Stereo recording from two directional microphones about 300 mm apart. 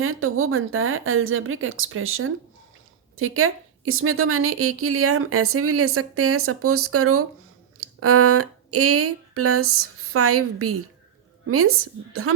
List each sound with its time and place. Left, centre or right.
0.0 s a woman's voice: right